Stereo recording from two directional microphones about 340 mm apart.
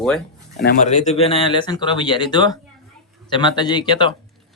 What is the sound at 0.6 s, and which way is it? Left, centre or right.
Speech, left.